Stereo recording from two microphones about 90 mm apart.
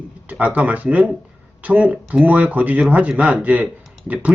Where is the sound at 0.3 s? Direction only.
15° right (ahead or behind).